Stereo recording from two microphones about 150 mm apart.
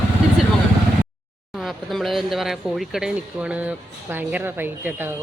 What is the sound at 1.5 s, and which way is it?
Speech, centre (ahead or behind).